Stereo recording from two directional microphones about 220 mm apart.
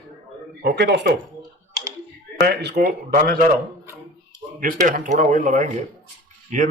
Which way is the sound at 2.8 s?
45° right (ahead or behind).